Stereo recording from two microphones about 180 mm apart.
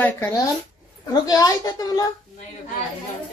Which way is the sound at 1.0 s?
20° left (ahead or behind).